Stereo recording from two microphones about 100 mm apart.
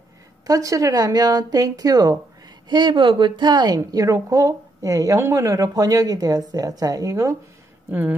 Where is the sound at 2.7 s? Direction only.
50° right (ahead or behind); by 7.3 s 35° right (ahead or behind).